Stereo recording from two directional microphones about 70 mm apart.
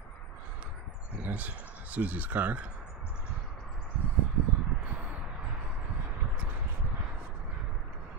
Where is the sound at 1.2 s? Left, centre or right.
Right.